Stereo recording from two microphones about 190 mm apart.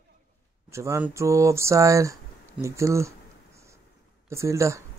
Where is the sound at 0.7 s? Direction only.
15° right (ahead or behind).